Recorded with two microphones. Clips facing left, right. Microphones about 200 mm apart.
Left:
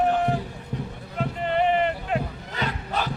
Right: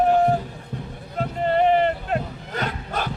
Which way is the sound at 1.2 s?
40° right (ahead or behind).